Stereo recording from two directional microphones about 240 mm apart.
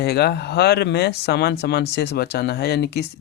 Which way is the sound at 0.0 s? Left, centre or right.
Left.